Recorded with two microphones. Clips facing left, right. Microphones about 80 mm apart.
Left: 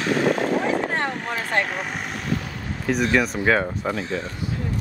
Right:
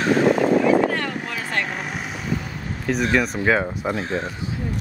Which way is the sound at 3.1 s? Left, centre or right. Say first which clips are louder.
Right 1 dB; centre.